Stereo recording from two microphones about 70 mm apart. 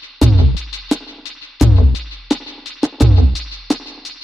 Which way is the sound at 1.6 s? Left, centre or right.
Centre.